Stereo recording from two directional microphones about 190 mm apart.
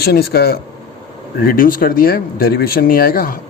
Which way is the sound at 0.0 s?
55° left (ahead or behind).